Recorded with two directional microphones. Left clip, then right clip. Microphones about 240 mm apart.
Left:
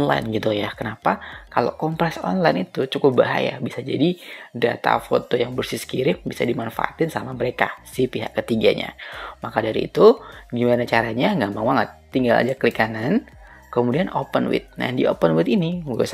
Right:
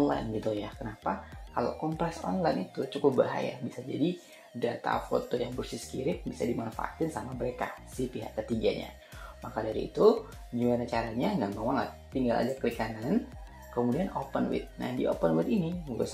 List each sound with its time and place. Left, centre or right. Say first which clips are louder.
0.0 s speech: left 9 dB; left
14.3 s speech: left 11 dB; left